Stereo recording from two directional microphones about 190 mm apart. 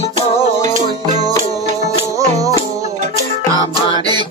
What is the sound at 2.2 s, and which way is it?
Music, 15° right (ahead or behind).